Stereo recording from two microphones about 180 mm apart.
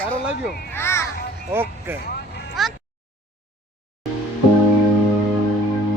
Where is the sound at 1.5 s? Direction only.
10° right (ahead or behind).